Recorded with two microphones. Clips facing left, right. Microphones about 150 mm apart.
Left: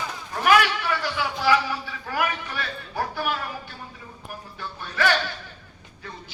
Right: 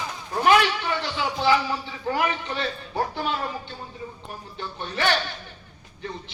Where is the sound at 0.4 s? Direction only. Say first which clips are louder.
Even; 25° right (ahead or behind).